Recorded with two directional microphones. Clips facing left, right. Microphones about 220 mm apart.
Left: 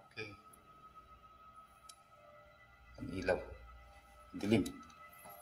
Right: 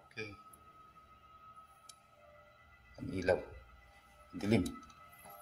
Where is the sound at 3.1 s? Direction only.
10° right (ahead or behind).